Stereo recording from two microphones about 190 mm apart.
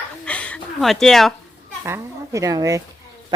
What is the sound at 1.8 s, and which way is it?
A child's voice, 15° right (ahead or behind).